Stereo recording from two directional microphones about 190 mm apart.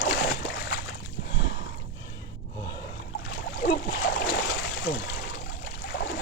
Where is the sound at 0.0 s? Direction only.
55° left (ahead or behind).